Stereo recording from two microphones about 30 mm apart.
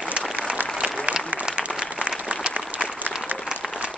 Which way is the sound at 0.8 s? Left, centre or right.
Right.